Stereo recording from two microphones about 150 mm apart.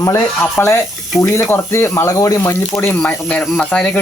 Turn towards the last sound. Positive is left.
turn(degrees=5)  # may be behind; listen again after turning